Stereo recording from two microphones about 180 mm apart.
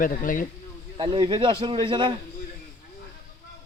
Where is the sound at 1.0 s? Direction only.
25° right (ahead or behind).